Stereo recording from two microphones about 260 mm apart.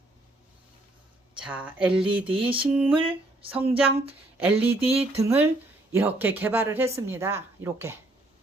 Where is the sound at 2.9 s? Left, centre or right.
Centre.